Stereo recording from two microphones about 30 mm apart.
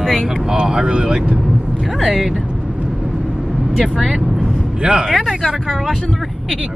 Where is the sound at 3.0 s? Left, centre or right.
Right.